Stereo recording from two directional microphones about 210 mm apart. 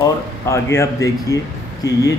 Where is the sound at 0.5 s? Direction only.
15° left (ahead or behind).